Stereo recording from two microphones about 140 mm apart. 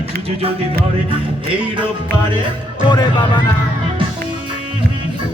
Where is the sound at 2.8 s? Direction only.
35° left (ahead or behind).